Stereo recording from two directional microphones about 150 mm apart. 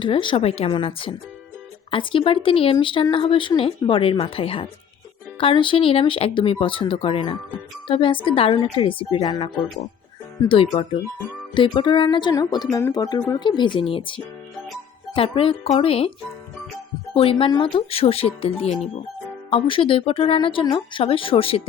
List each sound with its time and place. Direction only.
0.0 s speech: 35° left (ahead or behind)
10.5 s speech: 40° left (ahead or behind)
17.2 s speech: 40° left (ahead or behind)